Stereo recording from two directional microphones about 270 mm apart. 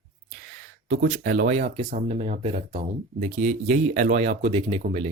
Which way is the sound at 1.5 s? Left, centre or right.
Right.